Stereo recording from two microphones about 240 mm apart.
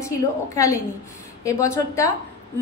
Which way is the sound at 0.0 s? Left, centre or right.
Centre.